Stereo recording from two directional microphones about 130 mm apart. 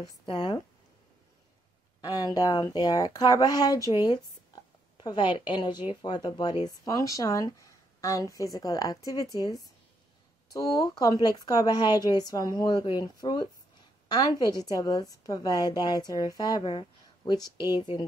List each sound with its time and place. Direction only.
0.3 s a woman's voice: 40° left (ahead or behind)
2.0 s a woman's voice: 30° left (ahead or behind)
10.5 s a woman's voice: 30° left (ahead or behind)
17.6 s speech: 20° right (ahead or behind)